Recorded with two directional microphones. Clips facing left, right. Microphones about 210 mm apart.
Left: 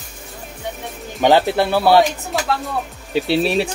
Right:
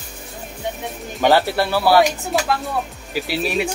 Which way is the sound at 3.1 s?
25° left (ahead or behind).